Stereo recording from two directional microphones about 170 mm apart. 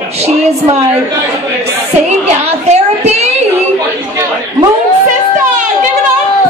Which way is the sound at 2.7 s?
40° right (ahead or behind).